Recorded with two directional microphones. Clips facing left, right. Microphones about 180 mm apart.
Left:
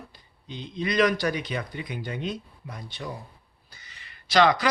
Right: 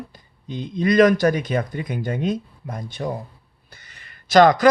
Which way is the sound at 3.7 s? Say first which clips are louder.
Right 2 dB; 50° right (ahead or behind).